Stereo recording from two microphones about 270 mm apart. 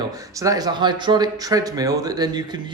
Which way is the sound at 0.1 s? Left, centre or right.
Centre.